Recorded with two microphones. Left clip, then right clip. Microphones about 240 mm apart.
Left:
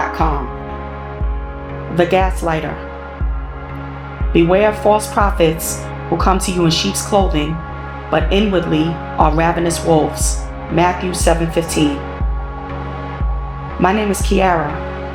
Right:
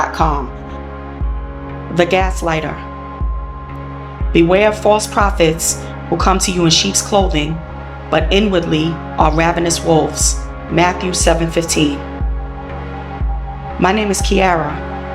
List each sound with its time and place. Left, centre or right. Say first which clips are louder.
0.0 s music: right 2 dB; right
2.0 s speech: even; right
4.3 s speech: right 1 dB; right
13.8 s speech: right 1 dB; right